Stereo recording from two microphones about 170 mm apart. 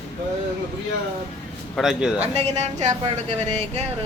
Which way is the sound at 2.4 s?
40° right (ahead or behind).